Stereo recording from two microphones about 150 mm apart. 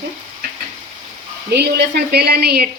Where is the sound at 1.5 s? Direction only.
90° right.